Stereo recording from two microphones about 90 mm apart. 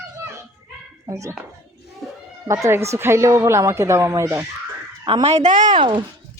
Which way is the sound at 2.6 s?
30° right (ahead or behind).